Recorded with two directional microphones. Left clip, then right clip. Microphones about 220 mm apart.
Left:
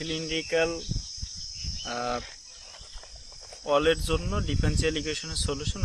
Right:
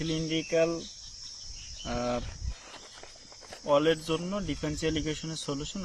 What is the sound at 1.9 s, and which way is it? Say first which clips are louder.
Speech: left 1 dB; 15° left (ahead or behind).